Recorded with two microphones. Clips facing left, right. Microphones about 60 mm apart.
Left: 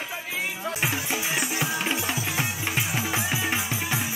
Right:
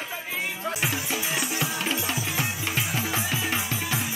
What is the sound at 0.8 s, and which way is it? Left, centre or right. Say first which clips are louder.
Music: left 2 dB; centre.